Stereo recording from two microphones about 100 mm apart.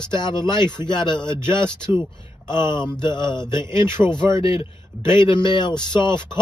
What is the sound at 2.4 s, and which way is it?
Speech, 45° left (ahead or behind).